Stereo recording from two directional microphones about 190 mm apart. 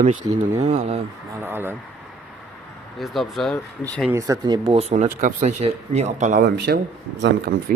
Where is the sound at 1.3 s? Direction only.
10° right (ahead or behind).